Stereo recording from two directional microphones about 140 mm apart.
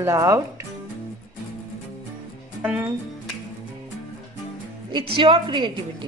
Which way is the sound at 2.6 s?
10° right (ahead or behind).